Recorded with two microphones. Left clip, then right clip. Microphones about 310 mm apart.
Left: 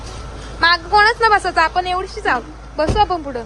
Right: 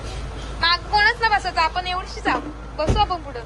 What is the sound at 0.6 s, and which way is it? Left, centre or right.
A woman's voice, left.